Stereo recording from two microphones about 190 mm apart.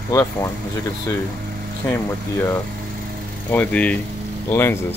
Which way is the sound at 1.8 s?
10° left (ahead or behind).